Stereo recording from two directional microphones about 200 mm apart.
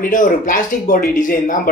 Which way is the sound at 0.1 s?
40° left (ahead or behind).